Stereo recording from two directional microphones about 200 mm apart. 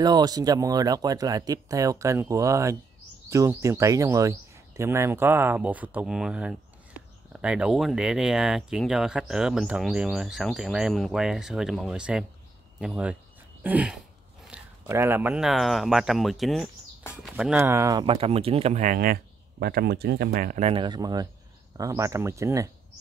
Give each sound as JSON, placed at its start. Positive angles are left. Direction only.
{"t": 0.0, "sound": "speech", "side_deg": -20}